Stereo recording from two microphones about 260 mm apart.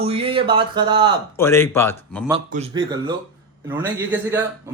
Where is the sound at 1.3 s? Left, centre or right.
Centre.